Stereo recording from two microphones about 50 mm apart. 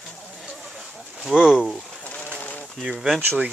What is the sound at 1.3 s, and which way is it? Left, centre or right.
Speech, centre.